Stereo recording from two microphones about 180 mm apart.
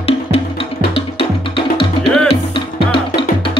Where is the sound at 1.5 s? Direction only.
30° left (ahead or behind).